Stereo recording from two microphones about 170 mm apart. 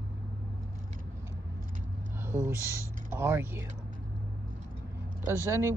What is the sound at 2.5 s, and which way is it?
Speech, 15° right (ahead or behind).